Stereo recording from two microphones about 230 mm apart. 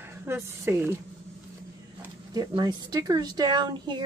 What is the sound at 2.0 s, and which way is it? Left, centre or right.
Speech, centre.